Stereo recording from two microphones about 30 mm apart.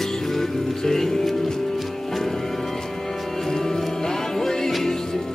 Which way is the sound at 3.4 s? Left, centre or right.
Centre.